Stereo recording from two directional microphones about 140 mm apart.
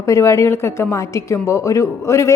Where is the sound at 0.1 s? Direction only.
20° left (ahead or behind).